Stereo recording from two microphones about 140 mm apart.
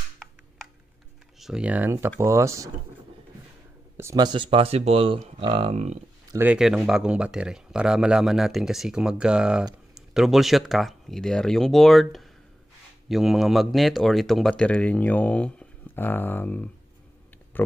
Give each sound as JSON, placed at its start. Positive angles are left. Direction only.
{"t": 1.4, "sound": "speech", "side_deg": -5}
{"t": 3.9, "sound": "a sound", "side_deg": -20}
{"t": 4.2, "sound": "speech", "side_deg": -35}
{"t": 5.7, "sound": "speech", "side_deg": -50}
{"t": 6.3, "sound": "speech", "side_deg": -10}